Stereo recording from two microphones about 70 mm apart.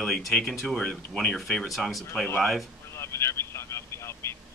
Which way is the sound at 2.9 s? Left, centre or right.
Left.